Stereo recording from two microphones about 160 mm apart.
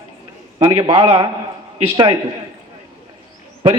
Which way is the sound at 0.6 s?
30° right (ahead or behind).